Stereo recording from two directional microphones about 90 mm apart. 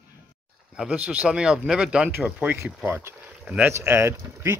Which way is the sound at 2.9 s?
30° right (ahead or behind).